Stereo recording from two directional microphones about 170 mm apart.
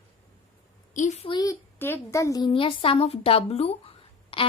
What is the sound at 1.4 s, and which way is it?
A woman's voice, 15° left (ahead or behind).